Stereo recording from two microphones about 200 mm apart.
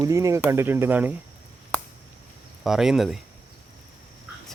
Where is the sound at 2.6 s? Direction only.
Centre (ahead or behind).